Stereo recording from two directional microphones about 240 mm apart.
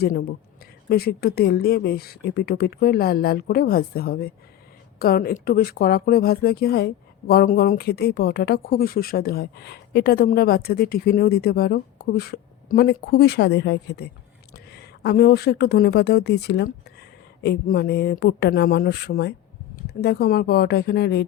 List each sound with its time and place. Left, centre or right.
0.0 s speech: left